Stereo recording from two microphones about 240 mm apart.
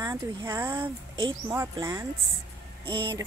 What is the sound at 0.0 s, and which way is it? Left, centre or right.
Speech, centre.